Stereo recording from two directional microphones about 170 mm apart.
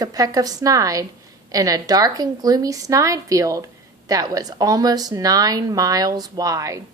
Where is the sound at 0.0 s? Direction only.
20° right (ahead or behind).